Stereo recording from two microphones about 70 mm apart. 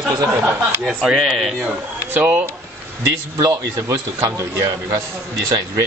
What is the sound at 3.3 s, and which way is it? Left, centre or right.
A man's voice, right.